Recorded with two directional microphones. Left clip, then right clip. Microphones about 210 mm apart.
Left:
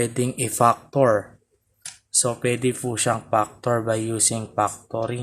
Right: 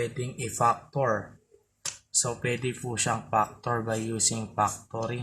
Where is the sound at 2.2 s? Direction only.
45° left (ahead or behind).